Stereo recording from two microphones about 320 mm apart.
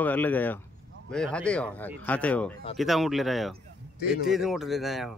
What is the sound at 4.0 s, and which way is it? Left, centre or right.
Speech, left.